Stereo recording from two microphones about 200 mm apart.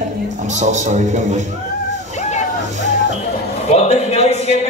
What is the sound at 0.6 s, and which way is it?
Speech, 35° right (ahead or behind).